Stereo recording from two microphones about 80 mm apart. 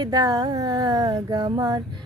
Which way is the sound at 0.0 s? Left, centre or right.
Right.